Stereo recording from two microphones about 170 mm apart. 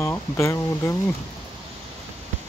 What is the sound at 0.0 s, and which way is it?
Speech, 15° left (ahead or behind).